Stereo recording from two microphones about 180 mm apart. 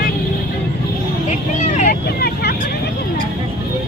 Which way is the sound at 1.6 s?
40° left (ahead or behind).